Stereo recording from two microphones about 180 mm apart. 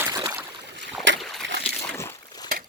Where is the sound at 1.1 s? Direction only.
90° right.